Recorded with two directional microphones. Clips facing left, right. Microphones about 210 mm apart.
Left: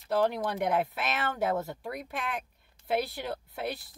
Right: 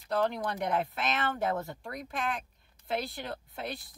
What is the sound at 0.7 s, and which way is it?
A woman's voice, 5° left (ahead or behind).